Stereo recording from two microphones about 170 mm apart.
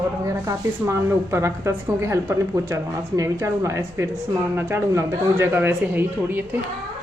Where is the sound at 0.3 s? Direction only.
15° right (ahead or behind).